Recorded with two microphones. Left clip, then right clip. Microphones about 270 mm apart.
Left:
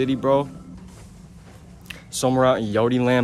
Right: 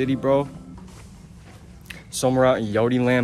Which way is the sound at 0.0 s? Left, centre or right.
Centre.